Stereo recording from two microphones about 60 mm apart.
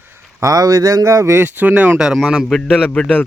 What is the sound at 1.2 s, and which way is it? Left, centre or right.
Speech, right.